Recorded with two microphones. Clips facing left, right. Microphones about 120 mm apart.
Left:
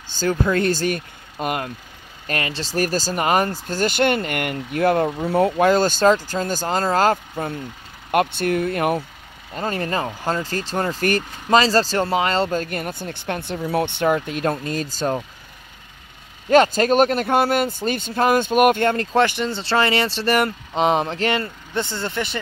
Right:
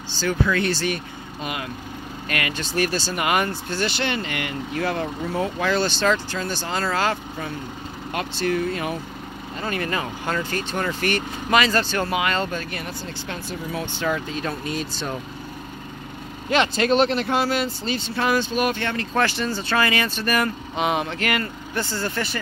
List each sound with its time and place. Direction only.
0.2 s speech: 40° left (ahead or behind)
2.2 s speech: 30° left (ahead or behind)
8.1 s speech: 55° left (ahead or behind)
9.6 s speech: 35° left (ahead or behind)
12.6 s speech: 50° left (ahead or behind)
16.4 s speech: 45° left (ahead or behind)
19.1 s speech: 20° left (ahead or behind)